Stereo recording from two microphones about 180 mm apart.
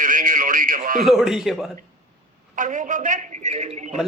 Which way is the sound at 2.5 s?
45° right (ahead or behind).